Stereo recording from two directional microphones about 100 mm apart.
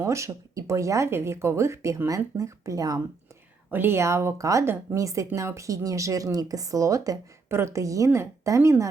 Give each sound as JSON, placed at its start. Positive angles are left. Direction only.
{"t": 0.0, "sound": "speech", "side_deg": -30}
{"t": 3.7, "sound": "speech", "side_deg": -20}